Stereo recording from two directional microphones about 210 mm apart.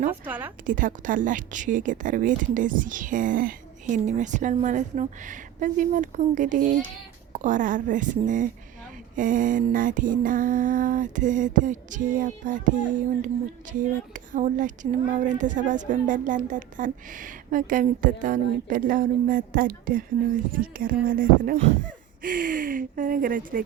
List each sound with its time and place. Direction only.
0.1 s a woman's voice: 10° right (ahead or behind)
0.6 s speech: 40° right (ahead or behind)